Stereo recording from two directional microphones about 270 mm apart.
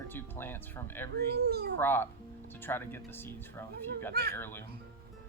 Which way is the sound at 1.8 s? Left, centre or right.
Centre.